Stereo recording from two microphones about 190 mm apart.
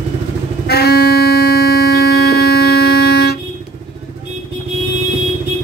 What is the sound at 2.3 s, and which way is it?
Music, 55° left (ahead or behind).